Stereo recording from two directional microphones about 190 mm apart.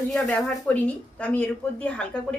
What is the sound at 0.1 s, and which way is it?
Speech, 5° left (ahead or behind).